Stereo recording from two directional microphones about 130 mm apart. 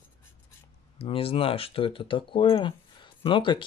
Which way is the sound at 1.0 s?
45° left (ahead or behind).